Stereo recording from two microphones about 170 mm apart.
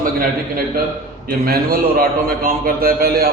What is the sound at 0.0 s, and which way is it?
A man's voice, 55° right (ahead or behind).